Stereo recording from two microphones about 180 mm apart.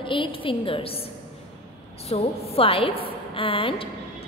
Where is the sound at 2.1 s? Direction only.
35° left (ahead or behind).